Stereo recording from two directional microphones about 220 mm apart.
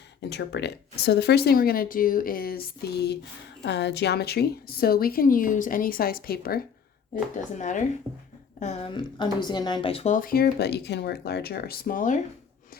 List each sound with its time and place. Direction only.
0.3 s a woman's voice: 50° left (ahead or behind)
8.5 s a woman's voice: 35° left (ahead or behind)
8.9 s speech: 20° left (ahead or behind); by 12.1 s 40° left (ahead or behind)